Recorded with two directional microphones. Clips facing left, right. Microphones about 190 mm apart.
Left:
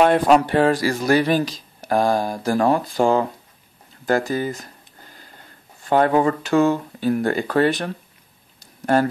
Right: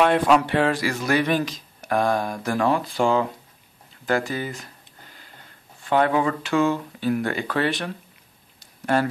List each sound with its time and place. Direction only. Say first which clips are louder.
0.0 s speech: left 3 dB; 40° left (ahead or behind)
5.9 s speech: left 3 dB; 40° left (ahead or behind)
8.5 s a sound: left 4 dB; 40° left (ahead or behind)